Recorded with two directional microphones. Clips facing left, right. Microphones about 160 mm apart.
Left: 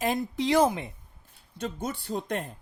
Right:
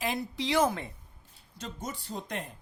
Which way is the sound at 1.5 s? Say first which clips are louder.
Left 6 dB; 60° left (ahead or behind).